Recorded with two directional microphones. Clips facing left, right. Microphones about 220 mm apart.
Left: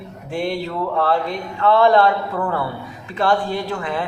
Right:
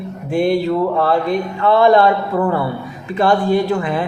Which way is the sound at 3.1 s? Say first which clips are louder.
Right 5 dB; 15° right (ahead or behind).